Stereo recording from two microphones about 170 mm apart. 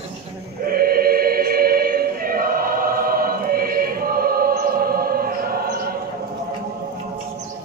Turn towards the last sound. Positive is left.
turn(degrees=-60)  # may be behind; listen again after turning